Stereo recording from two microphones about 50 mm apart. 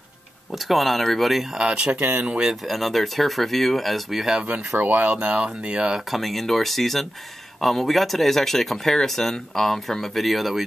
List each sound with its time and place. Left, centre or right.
0.5 s speech: centre
1.6 s speech: centre
2.0 s speech: right
2.2 s speech: centre
2.6 s speech: centre
4.4 s speech: right
4.7 s speech: right
5.0 s speech: right
6.0 s speech: centre